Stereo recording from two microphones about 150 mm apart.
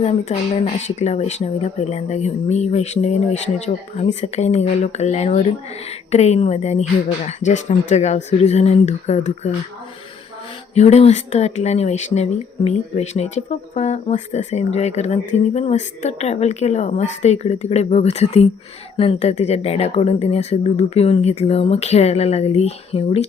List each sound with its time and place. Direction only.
0.0 s speech: 40° left (ahead or behind)
10.8 s speech: 45° left (ahead or behind)